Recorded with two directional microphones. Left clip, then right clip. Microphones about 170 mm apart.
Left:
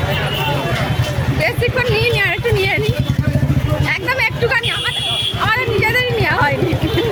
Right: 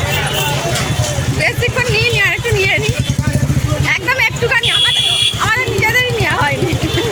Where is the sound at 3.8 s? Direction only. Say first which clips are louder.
Right 4 dB; 10° right (ahead or behind).